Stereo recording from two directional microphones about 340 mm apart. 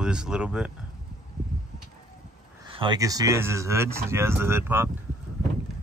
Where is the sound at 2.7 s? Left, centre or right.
Centre.